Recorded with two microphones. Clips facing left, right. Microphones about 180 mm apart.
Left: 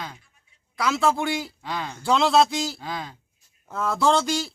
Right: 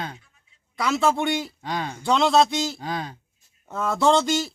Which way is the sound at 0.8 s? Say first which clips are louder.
Right 1 dB; centre (ahead or behind).